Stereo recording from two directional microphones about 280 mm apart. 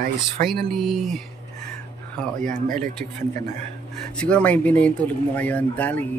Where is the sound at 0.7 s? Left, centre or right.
Centre.